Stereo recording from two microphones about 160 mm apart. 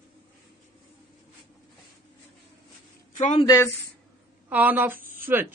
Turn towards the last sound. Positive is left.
turn(degrees=-15)  # may be behind; listen again after turning